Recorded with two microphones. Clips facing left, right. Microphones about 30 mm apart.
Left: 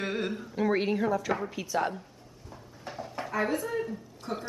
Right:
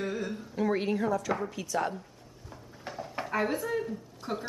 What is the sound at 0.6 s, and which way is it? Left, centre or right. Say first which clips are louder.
A woman's voice: left 1 dB; centre.